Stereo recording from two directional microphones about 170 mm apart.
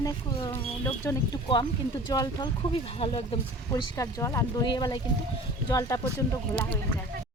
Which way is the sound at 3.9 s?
20° left (ahead or behind).